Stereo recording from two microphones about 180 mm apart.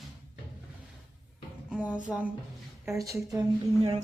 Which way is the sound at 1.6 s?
5° right (ahead or behind).